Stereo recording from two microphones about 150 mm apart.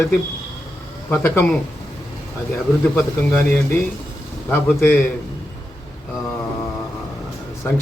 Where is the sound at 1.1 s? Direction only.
15° left (ahead or behind).